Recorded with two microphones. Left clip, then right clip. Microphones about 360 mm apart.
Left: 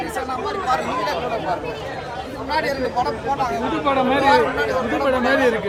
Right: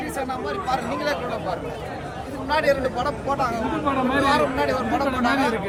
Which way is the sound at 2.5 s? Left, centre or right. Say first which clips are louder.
Right 1 dB; right.